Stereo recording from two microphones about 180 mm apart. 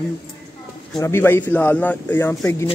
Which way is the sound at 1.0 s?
15° left (ahead or behind).